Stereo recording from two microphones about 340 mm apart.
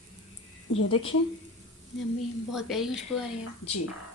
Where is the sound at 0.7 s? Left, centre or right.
Left.